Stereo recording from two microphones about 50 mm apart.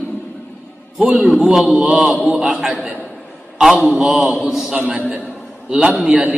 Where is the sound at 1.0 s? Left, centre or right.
Right.